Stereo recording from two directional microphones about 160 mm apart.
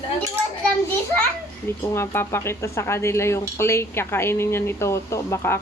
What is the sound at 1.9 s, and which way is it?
Speech, 15° left (ahead or behind).